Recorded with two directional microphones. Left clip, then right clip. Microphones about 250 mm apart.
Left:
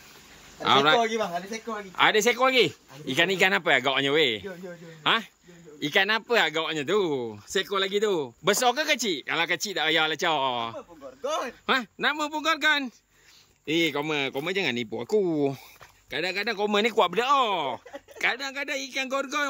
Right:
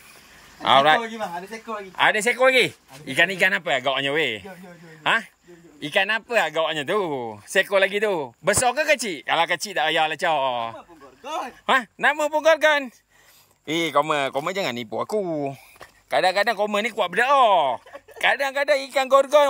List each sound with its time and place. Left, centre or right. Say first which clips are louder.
0.6 s speech: right 4 dB; centre
2.0 s a man's voice: right 2 dB; centre
16.1 s speech: right 9 dB; centre